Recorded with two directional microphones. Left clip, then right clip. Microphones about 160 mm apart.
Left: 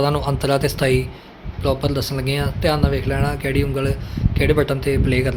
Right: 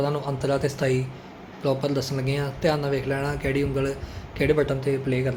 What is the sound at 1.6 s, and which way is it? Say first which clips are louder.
Speech: left 4 dB; 25° left (ahead or behind).